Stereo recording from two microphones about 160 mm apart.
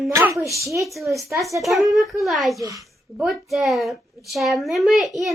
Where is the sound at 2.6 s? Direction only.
20° right (ahead or behind).